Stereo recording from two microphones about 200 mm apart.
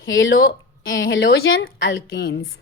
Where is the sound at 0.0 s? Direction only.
70° left (ahead or behind).